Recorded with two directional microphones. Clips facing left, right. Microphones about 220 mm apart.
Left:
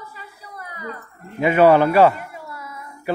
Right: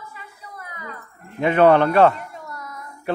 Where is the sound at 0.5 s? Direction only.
35° left (ahead or behind).